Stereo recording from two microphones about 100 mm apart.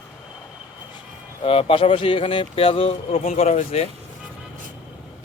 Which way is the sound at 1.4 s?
65° left (ahead or behind).